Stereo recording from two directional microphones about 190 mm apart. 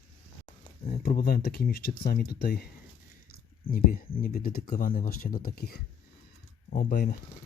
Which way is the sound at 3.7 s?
50° left (ahead or behind).